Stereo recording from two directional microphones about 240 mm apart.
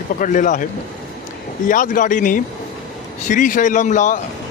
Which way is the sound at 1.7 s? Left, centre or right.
Left.